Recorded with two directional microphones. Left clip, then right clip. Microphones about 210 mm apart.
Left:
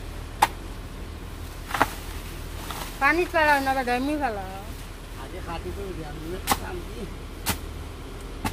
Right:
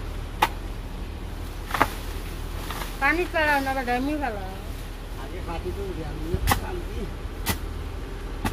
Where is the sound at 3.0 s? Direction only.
30° left (ahead or behind).